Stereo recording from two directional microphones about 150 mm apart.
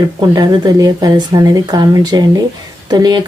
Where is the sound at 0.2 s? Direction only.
30° right (ahead or behind).